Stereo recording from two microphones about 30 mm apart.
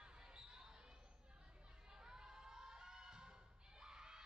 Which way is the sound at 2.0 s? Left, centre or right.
Right.